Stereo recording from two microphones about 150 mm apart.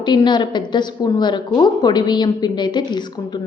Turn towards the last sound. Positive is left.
turn(degrees=30)  # may be behind; listen again after turning